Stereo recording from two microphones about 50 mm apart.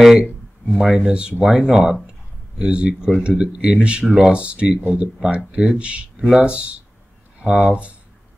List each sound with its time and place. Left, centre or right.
0.0 s a sound: centre
0.7 s speech: centre; by 6.0 s right
6.1 s speech: centre
6.4 s speech: right